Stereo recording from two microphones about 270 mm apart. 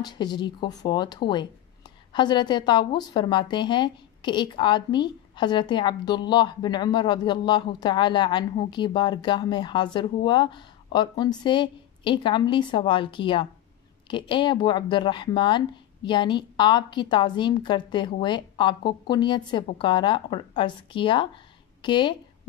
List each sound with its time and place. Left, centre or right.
0.0 s speech: centre